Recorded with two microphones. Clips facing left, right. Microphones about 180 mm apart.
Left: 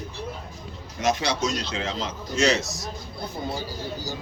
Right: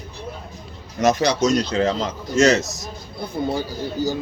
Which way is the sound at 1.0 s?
40° right (ahead or behind).